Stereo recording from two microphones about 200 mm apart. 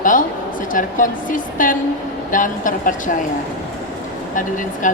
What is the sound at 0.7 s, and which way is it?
A woman's voice, 40° left (ahead or behind).